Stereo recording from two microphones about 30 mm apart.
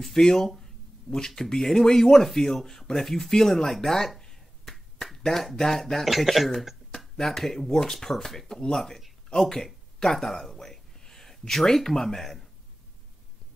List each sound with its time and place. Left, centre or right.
0.0 s speech: centre
4.2 s finger snapping: centre
5.6 s speech: centre
6.0 s speech: centre
7.2 s speech: centre